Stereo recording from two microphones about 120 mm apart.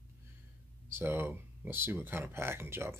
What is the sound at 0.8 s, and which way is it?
Speech, 20° right (ahead or behind).